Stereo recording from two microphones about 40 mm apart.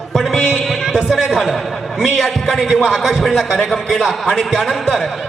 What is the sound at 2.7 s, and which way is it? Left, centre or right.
A man's voice, centre.